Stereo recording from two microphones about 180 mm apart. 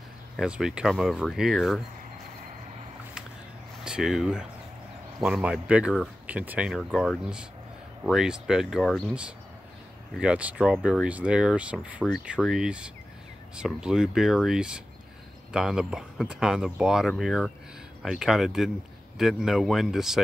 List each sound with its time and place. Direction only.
0.4 s speech: 5° right (ahead or behind)
3.8 s speech: 5° right (ahead or behind)